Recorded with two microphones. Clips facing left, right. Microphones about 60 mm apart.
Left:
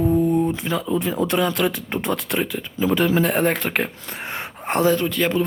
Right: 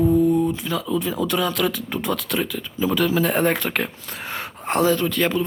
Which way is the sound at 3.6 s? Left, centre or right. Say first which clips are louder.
Left 1 dB; centre.